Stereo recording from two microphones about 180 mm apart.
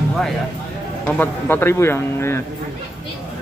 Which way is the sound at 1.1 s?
10° left (ahead or behind).